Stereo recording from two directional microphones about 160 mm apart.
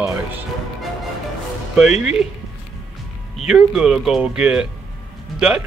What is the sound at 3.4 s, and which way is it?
Speech, 5° right (ahead or behind).